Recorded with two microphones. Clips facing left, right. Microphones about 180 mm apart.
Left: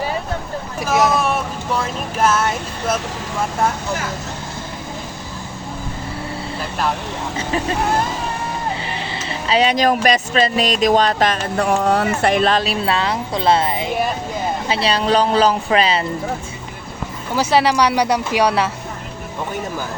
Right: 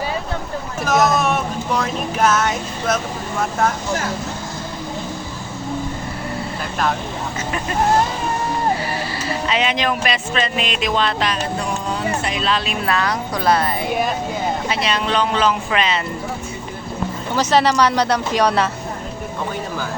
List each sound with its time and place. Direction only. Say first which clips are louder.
0.8 s hubbub: even; 10° left (ahead or behind)
1.7 s speech: even; 10° left (ahead or behind)
9.5 s speech: left 6 dB; 35° left (ahead or behind)
12.8 s speech: left 1 dB; 25° left (ahead or behind)
14.7 s speech: left 8 dB; 30° left (ahead or behind)
17.3 s speech: left 1 dB; 10° left (ahead or behind)